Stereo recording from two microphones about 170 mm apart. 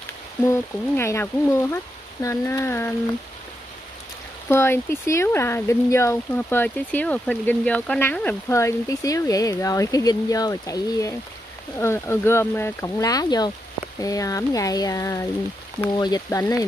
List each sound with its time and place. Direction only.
0.4 s speech: 15° left (ahead or behind)
4.5 s speech: 15° left (ahead or behind)